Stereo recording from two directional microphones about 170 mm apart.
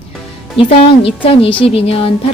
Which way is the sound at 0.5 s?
35° left (ahead or behind).